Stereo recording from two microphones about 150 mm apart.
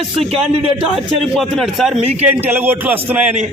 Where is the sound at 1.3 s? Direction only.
Centre (ahead or behind).